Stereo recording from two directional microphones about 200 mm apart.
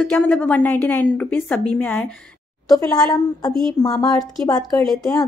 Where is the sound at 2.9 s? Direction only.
20° left (ahead or behind).